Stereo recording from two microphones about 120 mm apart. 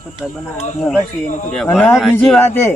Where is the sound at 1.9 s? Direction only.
5° right (ahead or behind).